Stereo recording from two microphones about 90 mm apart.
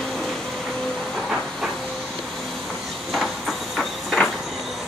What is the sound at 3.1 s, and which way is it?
Train, 5° left (ahead or behind).